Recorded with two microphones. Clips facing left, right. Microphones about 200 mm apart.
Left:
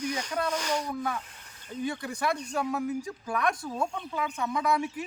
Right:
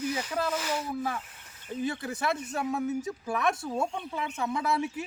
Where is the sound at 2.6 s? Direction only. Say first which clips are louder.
Right 1 dB; 25° right (ahead or behind).